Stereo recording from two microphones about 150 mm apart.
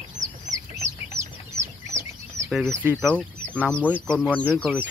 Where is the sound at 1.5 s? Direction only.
20° right (ahead or behind).